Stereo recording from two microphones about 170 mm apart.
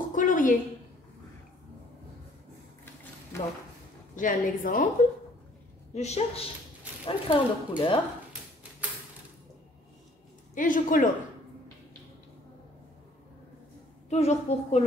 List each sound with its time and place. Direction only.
0.1 s a sound: 50° left (ahead or behind)
3.3 s a sound: 15° left (ahead or behind)
4.1 s a woman's voice: 50° left (ahead or behind)
5.9 s a woman's voice: 40° left (ahead or behind)
10.5 s speech: 50° left (ahead or behind)
14.0 s a woman's voice: 40° left (ahead or behind)